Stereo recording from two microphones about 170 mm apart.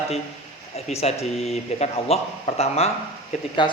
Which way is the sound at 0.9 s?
40° left (ahead or behind).